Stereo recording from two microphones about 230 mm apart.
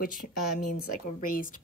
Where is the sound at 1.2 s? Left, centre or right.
Left.